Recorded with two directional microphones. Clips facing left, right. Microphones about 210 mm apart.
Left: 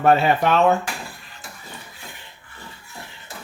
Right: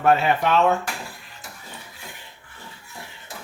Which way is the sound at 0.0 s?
35° left (ahead or behind).